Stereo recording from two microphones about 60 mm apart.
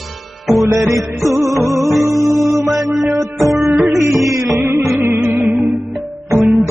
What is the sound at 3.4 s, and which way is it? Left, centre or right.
Music, right.